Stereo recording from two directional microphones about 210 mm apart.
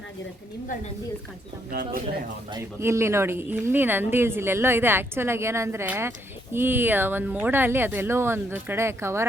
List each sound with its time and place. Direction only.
1.7 s speech: 45° right (ahead or behind)
2.5 s speech: 15° right (ahead or behind)